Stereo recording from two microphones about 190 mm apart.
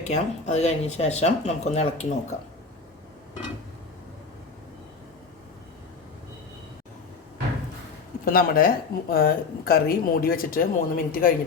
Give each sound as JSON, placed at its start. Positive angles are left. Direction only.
{"t": 0.0, "sound": "speech", "side_deg": 35}
{"t": 8.2, "sound": "speech", "side_deg": 50}